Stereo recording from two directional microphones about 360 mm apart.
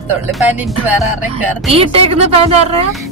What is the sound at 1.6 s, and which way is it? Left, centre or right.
Speech, centre.